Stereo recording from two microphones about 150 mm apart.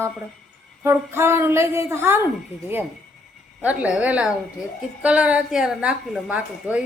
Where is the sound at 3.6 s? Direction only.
10° right (ahead or behind).